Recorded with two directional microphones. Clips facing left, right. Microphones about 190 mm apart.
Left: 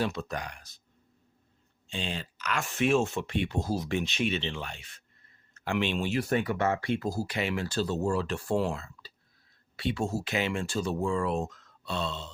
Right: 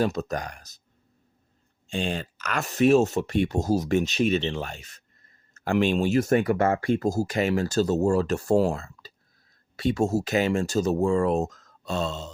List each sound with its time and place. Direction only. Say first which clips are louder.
0.0 s speech: right 6 dB; 40° right (ahead or behind)
1.9 s speech: right 7 dB; 50° right (ahead or behind)